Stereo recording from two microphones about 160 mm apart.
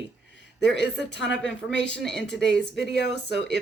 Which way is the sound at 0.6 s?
90° left.